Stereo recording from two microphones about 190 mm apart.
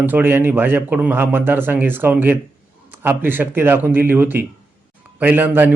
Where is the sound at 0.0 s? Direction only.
10° right (ahead or behind).